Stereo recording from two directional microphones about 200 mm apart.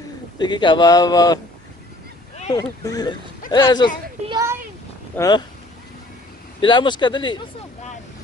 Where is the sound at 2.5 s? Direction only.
20° left (ahead or behind).